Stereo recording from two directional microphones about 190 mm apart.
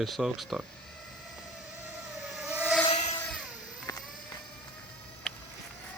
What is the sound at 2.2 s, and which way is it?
Vehicle, centre (ahead or behind).